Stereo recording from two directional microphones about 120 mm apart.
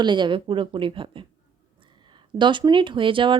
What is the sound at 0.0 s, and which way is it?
Speech, 40° right (ahead or behind).